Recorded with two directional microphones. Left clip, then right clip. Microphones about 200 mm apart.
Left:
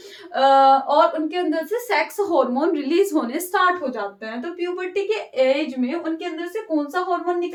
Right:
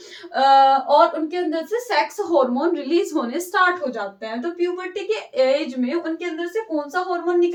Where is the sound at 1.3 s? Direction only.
30° left (ahead or behind).